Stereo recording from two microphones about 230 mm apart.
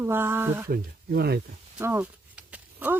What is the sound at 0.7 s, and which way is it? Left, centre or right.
Speech, right.